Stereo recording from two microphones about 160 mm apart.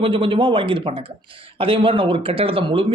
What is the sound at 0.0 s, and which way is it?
Speech, 30° right (ahead or behind).